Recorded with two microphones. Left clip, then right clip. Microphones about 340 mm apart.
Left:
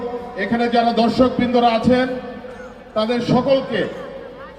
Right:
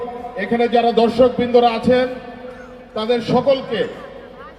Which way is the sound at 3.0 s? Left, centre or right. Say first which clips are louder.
Right 2 dB; left.